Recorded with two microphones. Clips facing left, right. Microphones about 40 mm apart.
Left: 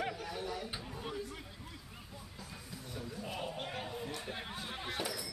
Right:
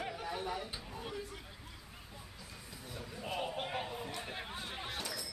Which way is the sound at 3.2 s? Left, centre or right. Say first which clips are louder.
Right 4 dB; centre.